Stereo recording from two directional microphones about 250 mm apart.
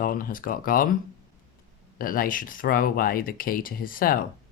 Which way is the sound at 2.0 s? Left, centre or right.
Left.